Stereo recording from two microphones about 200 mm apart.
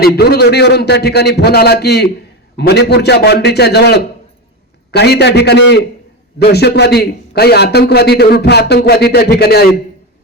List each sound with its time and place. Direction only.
0.0 s a man's voice: 55° left (ahead or behind)